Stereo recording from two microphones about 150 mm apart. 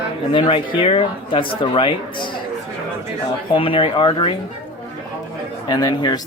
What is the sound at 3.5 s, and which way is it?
Speech, 35° left (ahead or behind).